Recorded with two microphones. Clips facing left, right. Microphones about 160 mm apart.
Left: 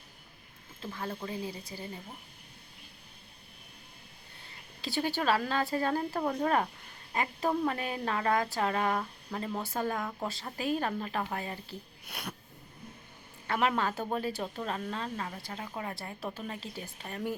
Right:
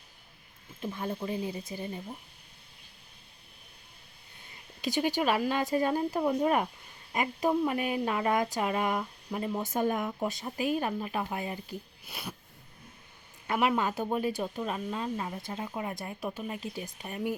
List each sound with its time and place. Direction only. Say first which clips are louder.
0.8 s speech: right 4 dB; 20° right (ahead or behind)
4.8 s speech: right 3 dB; 15° right (ahead or behind)
12.0 s speech: even; centre (ahead or behind)
13.5 s speech: right 2 dB; 10° right (ahead or behind)